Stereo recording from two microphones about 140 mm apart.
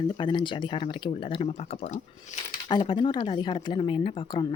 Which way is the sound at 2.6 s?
35° left (ahead or behind).